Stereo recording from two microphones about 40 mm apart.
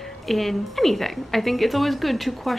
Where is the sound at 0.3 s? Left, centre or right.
Centre.